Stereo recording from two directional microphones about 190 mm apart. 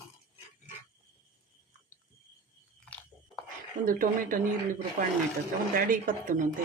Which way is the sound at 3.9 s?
45° right (ahead or behind).